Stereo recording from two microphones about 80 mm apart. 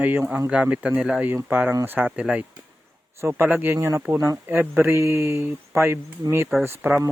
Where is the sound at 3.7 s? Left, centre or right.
Right.